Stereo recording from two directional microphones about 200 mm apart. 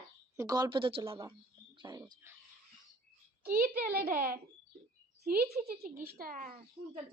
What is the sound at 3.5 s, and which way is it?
Speech, 50° right (ahead or behind).